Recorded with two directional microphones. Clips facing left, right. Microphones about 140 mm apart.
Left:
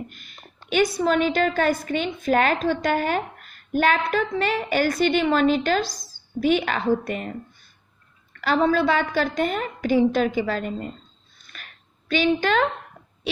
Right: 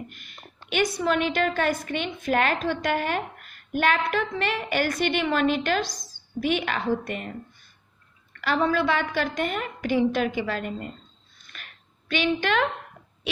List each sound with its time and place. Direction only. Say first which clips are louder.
0.9 s a woman's voice: left 3 dB; 40° left (ahead or behind)
5.9 s a woman's voice: left 1 dB; 5° left (ahead or behind)
6.4 s a woman's voice: left 5 dB; 40° left (ahead or behind)
8.4 s a woman's voice: left 3 dB; 35° left (ahead or behind)
11.5 s a sound: left 1 dB; 40° left (ahead or behind)